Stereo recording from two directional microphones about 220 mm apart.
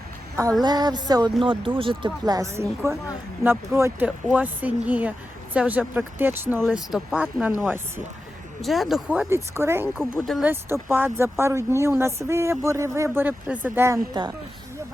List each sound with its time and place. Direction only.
0.6 s speech: 20° right (ahead or behind); by 10.5 s centre (ahead or behind)
10.5 s speech: 10° right (ahead or behind)